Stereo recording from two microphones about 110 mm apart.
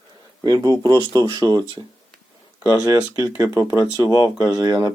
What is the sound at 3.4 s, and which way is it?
Speech, 30° right (ahead or behind).